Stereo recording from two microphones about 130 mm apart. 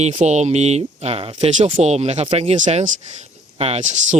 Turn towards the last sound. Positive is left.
turn(degrees=-65)  # may be behind; listen again after turning